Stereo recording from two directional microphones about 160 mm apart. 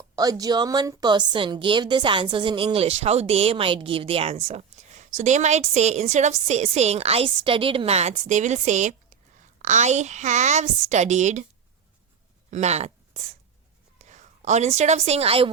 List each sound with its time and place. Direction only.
0.2 s a woman's voice: 25° right (ahead or behind); by 11.4 s 45° right (ahead or behind)
12.5 s a sound: 45° right (ahead or behind)
14.0 s a woman's voice: 50° right (ahead or behind)